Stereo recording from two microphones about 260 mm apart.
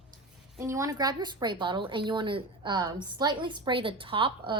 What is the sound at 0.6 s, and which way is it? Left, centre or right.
A woman's voice, centre.